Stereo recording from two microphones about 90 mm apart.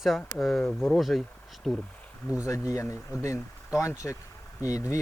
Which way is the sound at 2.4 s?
40° left (ahead or behind).